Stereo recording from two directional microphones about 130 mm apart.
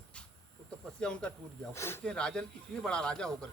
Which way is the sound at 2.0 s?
5° left (ahead or behind).